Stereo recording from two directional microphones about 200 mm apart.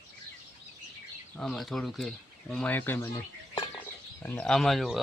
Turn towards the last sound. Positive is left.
turn(degrees=0)  # may be behind; listen again after turning